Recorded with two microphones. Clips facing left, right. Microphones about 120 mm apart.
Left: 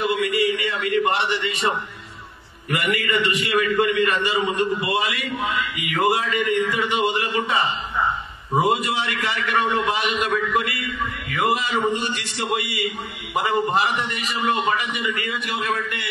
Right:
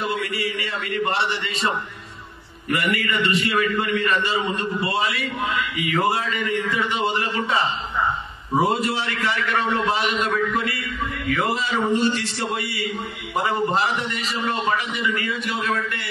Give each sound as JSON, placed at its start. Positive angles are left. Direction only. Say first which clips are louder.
{"t": 0.0, "sound": "a man's voice", "louder": "left 5 dB", "side_deg": 15}